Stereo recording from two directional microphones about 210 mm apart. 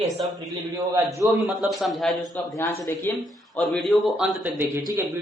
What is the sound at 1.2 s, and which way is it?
Speech, centre (ahead or behind).